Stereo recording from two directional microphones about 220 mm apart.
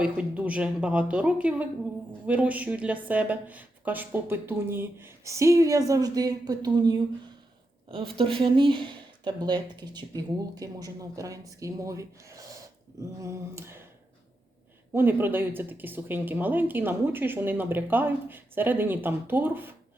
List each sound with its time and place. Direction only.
0.0 s speech: 5° right (ahead or behind)
14.9 s speech: 10° right (ahead or behind)